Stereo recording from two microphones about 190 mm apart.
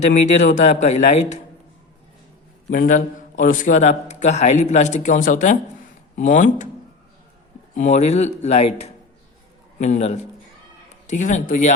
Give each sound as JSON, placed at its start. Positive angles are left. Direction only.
{"t": 0.0, "sound": "a man's voice", "side_deg": 40}
{"t": 2.6, "sound": "a man's voice", "side_deg": 45}
{"t": 7.8, "sound": "a man's voice", "side_deg": 35}